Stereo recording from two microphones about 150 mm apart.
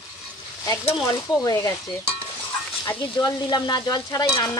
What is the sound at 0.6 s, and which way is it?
Speech, 20° left (ahead or behind).